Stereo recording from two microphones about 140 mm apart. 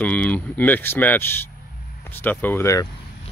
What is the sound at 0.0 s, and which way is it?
Speech, 10° left (ahead or behind).